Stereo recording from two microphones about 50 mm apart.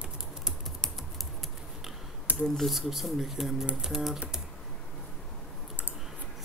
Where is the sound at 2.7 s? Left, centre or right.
Centre.